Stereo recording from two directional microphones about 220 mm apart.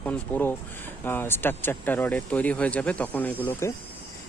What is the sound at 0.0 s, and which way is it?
Speech, 10° left (ahead or behind).